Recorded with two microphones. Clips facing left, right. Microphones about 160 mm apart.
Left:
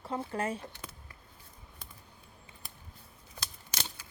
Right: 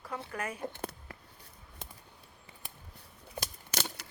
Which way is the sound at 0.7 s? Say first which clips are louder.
Right 8 dB; 60° right (ahead or behind).